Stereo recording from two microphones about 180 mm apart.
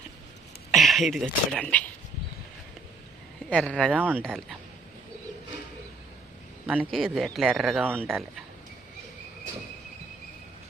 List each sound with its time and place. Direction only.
0.7 s speech: centre (ahead or behind)
3.5 s speech: 5° left (ahead or behind)
3.9 s speech: 10° right (ahead or behind)
6.9 s speech: centre (ahead or behind)